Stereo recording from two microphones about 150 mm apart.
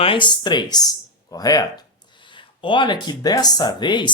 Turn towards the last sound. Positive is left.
turn(degrees=30)  # may be behind; listen again after turning